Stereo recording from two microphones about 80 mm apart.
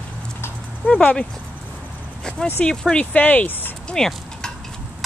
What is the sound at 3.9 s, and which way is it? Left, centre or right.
Stir, centre.